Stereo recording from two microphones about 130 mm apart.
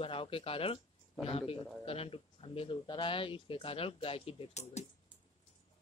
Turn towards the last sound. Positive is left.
turn(degrees=60)  # may be behind; listen again after turning